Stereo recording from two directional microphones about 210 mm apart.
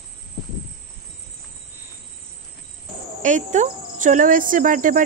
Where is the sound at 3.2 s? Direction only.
35° right (ahead or behind).